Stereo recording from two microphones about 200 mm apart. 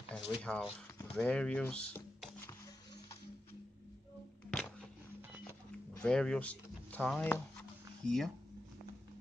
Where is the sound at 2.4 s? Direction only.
20° left (ahead or behind).